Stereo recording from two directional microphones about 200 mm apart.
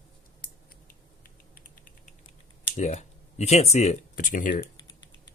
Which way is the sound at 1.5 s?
45° left (ahead or behind).